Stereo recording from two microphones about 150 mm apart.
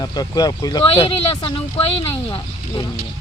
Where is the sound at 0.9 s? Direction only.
40° left (ahead or behind).